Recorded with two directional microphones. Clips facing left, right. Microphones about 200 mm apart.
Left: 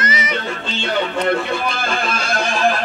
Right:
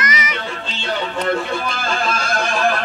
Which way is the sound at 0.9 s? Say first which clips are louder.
Left 2 dB; 40° right (ahead or behind).